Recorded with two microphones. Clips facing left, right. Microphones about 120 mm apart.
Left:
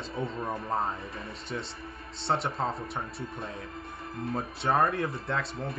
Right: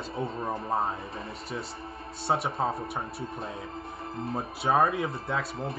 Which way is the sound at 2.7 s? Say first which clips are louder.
Right 2 dB; 25° right (ahead or behind).